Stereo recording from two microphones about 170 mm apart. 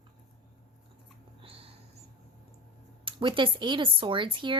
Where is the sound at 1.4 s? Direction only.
35° right (ahead or behind).